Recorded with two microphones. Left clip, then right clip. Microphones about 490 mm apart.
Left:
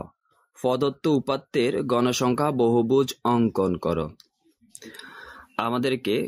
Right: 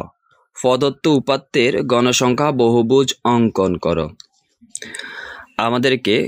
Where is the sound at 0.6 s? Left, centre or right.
Left.